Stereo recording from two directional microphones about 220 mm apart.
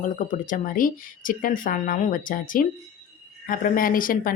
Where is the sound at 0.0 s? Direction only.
35° left (ahead or behind).